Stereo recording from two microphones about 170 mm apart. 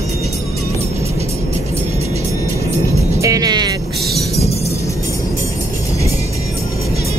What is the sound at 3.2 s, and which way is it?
Speech, 20° right (ahead or behind).